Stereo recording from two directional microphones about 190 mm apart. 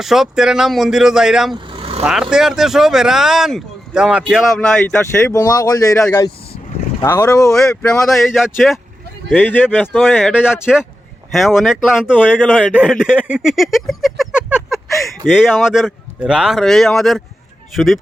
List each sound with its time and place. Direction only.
0.0 s speech: centre (ahead or behind)
1.5 s vehicle: 25° right (ahead or behind)
2.0 s speech: 5° right (ahead or behind); by 7.5 s 15° left (ahead or behind)
7.5 s speech: 5° left (ahead or behind)